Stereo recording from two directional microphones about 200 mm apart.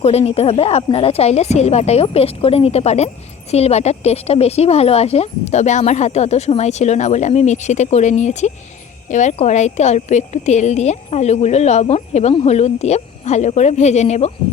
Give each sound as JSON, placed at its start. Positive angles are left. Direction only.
{"t": 0.0, "sound": "speech", "side_deg": 30}